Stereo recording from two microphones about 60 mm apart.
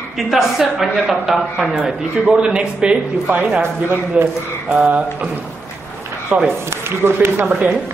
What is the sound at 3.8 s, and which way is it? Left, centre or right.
Speech, right.